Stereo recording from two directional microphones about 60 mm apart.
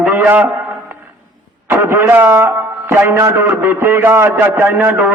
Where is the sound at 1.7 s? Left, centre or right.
Right.